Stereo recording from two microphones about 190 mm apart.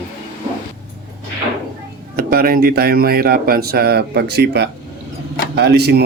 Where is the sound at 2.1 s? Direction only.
50° right (ahead or behind).